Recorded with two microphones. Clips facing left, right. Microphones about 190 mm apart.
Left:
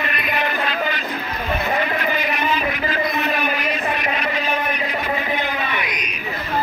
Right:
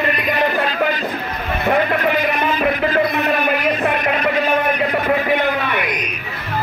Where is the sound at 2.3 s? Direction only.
50° right (ahead or behind).